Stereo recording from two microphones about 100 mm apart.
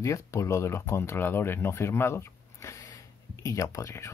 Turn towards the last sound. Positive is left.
turn(degrees=30)  # may be behind; listen again after turning